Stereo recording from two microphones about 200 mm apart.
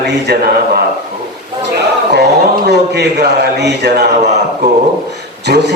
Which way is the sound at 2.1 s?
55° right (ahead or behind).